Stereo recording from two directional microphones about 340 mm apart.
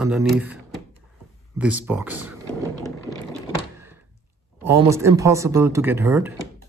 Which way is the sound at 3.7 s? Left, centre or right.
Centre.